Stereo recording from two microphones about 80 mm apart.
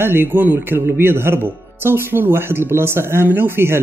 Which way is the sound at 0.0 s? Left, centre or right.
Right.